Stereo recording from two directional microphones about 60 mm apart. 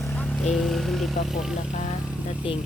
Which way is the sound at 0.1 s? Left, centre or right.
Left.